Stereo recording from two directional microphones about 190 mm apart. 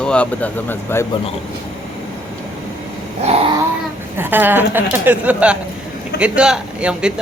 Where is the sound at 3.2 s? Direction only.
35° right (ahead or behind).